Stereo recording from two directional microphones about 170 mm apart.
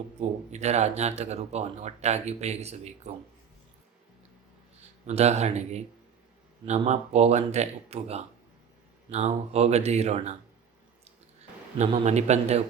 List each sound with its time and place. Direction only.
0.2 s speech: 40° right (ahead or behind)
5.0 s speech: 40° right (ahead or behind)
11.8 s speech: 40° right (ahead or behind)